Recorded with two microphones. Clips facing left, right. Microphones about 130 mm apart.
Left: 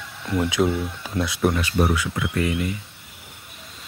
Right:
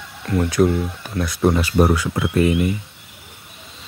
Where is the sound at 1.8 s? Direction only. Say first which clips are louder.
Right 5 dB; 40° right (ahead or behind); by 2.7 s 25° right (ahead or behind).